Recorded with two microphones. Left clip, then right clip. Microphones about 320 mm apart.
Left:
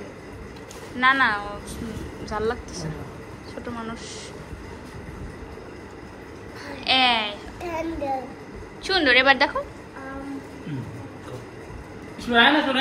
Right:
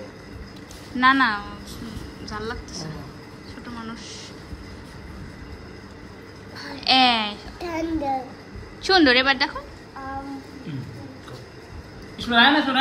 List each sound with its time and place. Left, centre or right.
0.9 s a woman's voice: centre
3.6 s a woman's voice: centre
6.8 s a woman's voice: centre
7.6 s speech: right
8.8 s a woman's voice: centre
12.2 s speech: right